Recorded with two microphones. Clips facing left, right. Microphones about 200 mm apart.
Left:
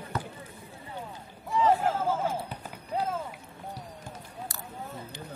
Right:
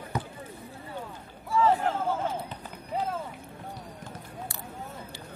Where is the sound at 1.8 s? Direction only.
10° left (ahead or behind).